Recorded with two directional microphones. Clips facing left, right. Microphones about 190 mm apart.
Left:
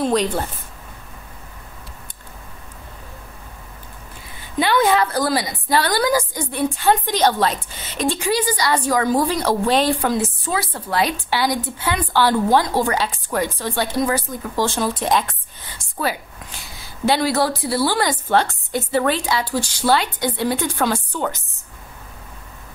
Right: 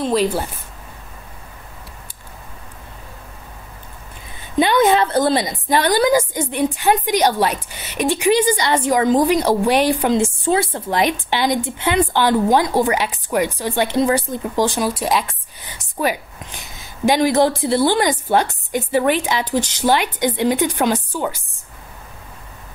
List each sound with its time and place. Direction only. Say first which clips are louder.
0.0 s speech: right 1 dB; 5° right (ahead or behind)
4.6 s a woman's voice: right 3 dB; 20° right (ahead or behind)